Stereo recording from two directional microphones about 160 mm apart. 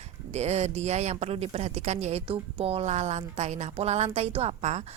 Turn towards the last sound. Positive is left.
turn(degrees=-45)  # may be behind; listen again after turning